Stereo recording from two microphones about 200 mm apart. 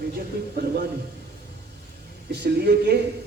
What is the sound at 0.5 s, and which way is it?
Speech, 50° right (ahead or behind).